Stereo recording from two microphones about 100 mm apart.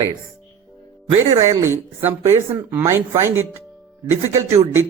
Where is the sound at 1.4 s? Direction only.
25° right (ahead or behind).